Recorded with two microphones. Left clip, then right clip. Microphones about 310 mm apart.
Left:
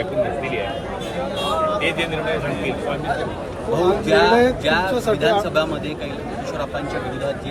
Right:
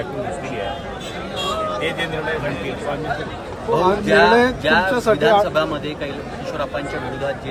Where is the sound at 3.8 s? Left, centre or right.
Right.